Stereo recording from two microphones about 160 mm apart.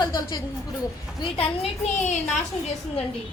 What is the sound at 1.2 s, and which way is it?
Speech, 35° left (ahead or behind).